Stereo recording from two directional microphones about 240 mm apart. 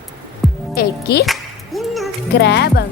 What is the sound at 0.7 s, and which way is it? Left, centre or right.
Speech, left.